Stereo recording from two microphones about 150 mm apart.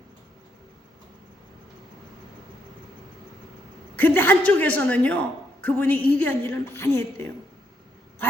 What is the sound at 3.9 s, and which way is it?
A man's voice, 15° left (ahead or behind).